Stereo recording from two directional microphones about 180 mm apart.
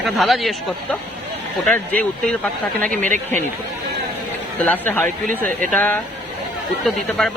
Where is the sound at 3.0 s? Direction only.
45° right (ahead or behind).